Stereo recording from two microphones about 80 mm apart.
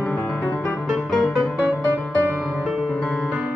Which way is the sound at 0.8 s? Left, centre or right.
Centre.